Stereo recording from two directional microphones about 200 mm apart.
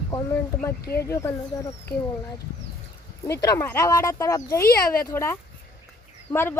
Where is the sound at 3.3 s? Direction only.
15° left (ahead or behind).